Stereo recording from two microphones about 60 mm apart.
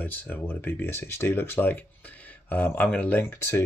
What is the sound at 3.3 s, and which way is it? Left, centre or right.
Speech, left.